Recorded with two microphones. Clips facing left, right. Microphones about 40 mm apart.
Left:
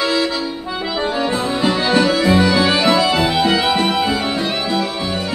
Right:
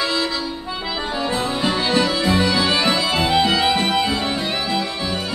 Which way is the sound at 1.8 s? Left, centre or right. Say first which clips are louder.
Left 4 dB; centre.